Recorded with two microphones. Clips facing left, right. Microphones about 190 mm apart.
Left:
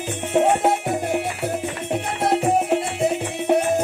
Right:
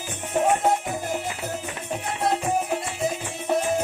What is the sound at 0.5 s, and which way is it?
Music, 65° left (ahead or behind).